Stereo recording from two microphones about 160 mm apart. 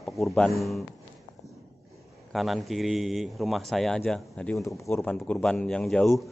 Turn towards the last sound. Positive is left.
turn(degrees=0)  # may be behind; listen again after turning